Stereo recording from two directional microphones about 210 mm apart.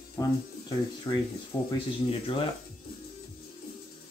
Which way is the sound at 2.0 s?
25° left (ahead or behind).